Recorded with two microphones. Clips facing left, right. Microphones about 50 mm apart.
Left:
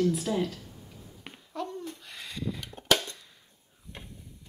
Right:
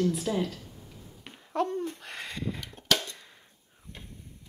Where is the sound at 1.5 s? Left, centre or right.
Right.